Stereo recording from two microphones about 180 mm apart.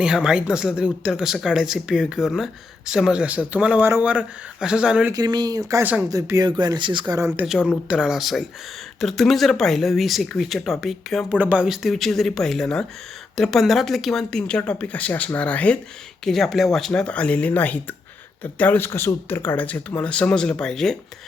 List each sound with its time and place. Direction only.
0.0 s speech: 5° right (ahead or behind)
5.1 s speech: 20° right (ahead or behind)
7.3 s speech: 5° right (ahead or behind)